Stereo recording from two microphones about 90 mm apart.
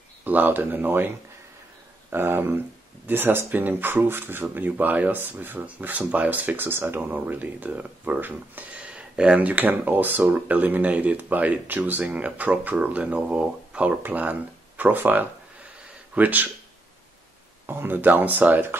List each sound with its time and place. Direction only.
0.2 s speech: 20° right (ahead or behind)
17.6 s speech: 20° right (ahead or behind)